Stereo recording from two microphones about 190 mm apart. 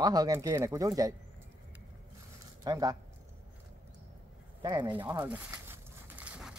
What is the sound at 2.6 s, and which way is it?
Speech, 20° right (ahead or behind).